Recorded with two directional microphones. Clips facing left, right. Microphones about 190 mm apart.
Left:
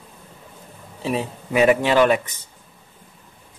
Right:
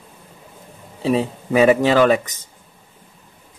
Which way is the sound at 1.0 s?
35° right (ahead or behind).